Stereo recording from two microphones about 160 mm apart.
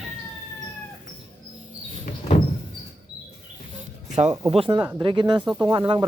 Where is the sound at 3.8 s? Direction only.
45° right (ahead or behind).